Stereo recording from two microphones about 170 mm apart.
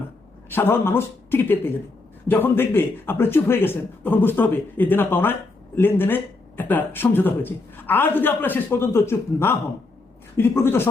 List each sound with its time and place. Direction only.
0.5 s speech: 15° left (ahead or behind)